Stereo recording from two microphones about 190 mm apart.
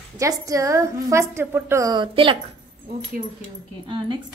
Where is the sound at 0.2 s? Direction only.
15° right (ahead or behind).